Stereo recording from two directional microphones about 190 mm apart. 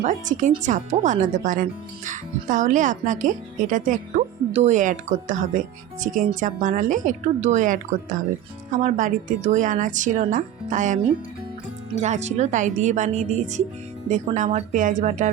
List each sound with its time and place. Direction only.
0.0 s speech: 40° right (ahead or behind)
12.0 s speech: 35° right (ahead or behind)